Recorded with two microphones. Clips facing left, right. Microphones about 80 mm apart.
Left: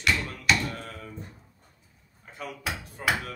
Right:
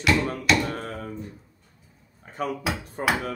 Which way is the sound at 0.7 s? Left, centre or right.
Right.